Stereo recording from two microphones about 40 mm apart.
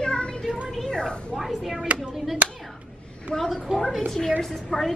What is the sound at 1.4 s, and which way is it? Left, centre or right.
Speech, centre.